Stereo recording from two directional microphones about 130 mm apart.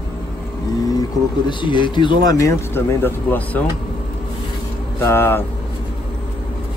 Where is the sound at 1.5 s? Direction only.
40° left (ahead or behind).